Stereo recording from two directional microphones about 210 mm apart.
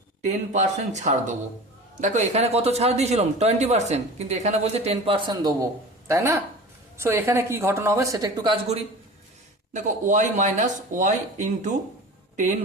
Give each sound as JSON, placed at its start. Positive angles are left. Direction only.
{"t": 0.2, "sound": "a man's voice", "side_deg": -35}
{"t": 9.7, "sound": "a man's voice", "side_deg": -35}